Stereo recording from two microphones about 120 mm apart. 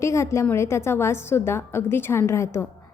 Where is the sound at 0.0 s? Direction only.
25° left (ahead or behind).